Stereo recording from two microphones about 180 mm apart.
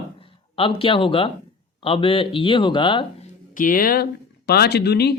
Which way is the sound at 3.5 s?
50° left (ahead or behind).